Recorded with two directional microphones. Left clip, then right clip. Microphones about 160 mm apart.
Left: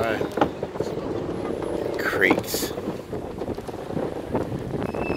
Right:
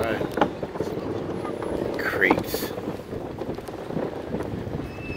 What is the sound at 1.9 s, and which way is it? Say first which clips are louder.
Vehicle: left 1 dB; 15° left (ahead or behind).